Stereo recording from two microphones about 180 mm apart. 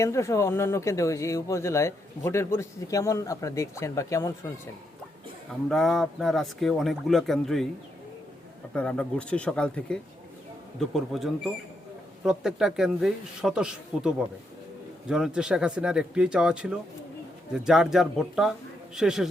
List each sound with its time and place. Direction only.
0.0 s speech: 15° left (ahead or behind)
5.6 s speech: centre (ahead or behind)
8.7 s speech: 5° left (ahead or behind)
15.1 s speech: 5° right (ahead or behind)